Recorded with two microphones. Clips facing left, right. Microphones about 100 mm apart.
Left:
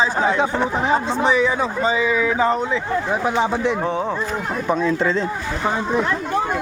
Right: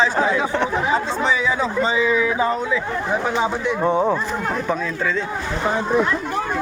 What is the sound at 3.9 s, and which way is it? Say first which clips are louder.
Speech: right 4 dB; 10° right (ahead or behind).